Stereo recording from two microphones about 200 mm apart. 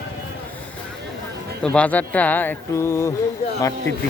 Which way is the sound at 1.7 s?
5° left (ahead or behind).